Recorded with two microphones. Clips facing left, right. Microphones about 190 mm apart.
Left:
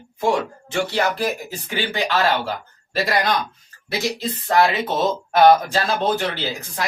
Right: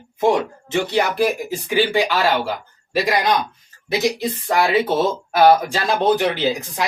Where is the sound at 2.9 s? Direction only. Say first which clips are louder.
Right 2 dB; 15° right (ahead or behind).